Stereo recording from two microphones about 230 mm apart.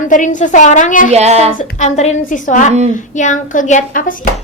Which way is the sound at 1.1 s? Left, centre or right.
Right.